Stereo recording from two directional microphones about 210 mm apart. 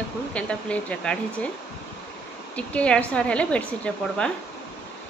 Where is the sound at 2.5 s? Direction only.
5° left (ahead or behind).